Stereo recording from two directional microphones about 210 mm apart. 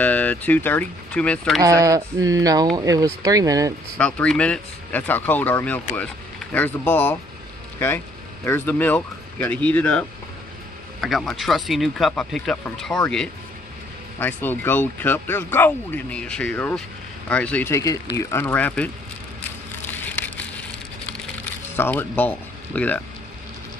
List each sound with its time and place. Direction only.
0.0 s speech: 5° left (ahead or behind)
1.6 s speech: 15° right (ahead or behind)
4.0 s speech: 5° left (ahead or behind)
8.5 s speech: 10° left (ahead or behind)
19.9 s a sound: 10° left (ahead or behind)
21.7 s speech: 10° left (ahead or behind)